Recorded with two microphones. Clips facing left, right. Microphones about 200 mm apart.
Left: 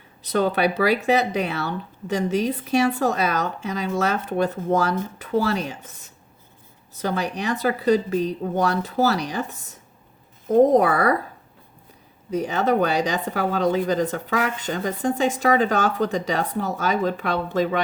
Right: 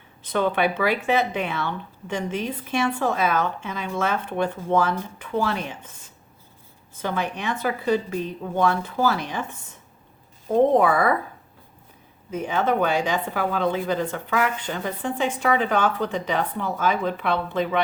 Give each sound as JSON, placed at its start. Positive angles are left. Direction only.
{"t": 0.3, "sound": "speech", "side_deg": 40}
{"t": 7.0, "sound": "speech", "side_deg": 40}
{"t": 12.3, "sound": "speech", "side_deg": 40}